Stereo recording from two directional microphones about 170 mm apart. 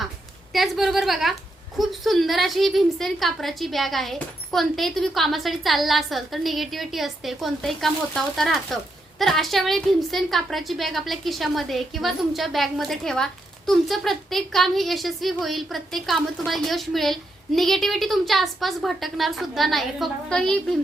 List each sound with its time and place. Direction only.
0.5 s a woman's voice: centre (ahead or behind)